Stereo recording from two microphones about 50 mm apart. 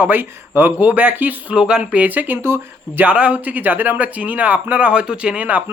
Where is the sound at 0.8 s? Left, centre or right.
Right.